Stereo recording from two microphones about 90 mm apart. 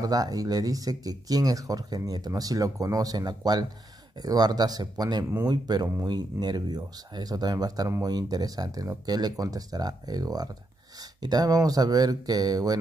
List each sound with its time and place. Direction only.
0.0 s speech: 45° right (ahead or behind)